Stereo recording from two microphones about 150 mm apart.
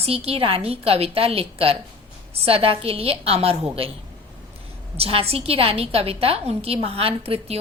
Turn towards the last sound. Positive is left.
turn(degrees=-40)  # may be behind; listen again after turning